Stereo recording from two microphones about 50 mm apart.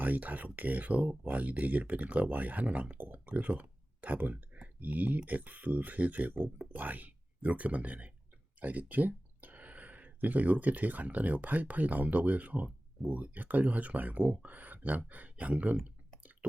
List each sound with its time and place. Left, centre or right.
0.0 s speech: right